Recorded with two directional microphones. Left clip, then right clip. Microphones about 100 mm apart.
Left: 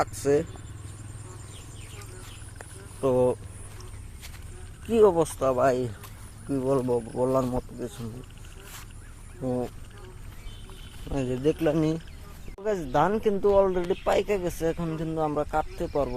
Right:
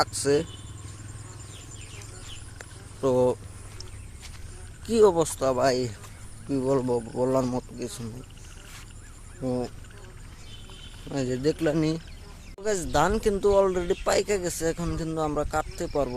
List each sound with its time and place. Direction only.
0.0 s speech: 35° right (ahead or behind)
2.6 s vehicle: 20° right (ahead or behind)
4.9 s speech: 15° right (ahead or behind)
6.7 s speech: 25° right (ahead or behind)
7.3 s speech: 35° right (ahead or behind)
9.4 s speech: 15° right (ahead or behind)
11.1 s speech: 5° right (ahead or behind)
14.8 s speech: 25° right (ahead or behind)